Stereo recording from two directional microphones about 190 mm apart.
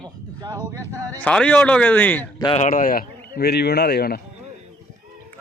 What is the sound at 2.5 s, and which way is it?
Speech, 40° left (ahead or behind).